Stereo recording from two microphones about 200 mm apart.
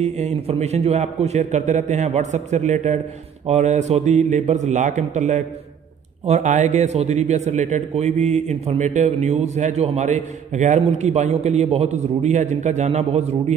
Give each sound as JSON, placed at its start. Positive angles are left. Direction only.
{"t": 0.0, "sound": "a man's voice", "side_deg": -35}